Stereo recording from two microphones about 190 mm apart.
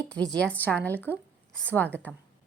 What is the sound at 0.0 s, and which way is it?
Speech, 5° left (ahead or behind).